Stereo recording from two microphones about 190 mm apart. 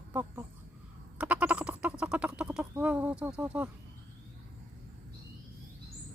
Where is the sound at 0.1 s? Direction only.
10° right (ahead or behind).